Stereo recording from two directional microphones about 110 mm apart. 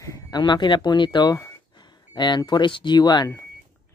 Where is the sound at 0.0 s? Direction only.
30° left (ahead or behind).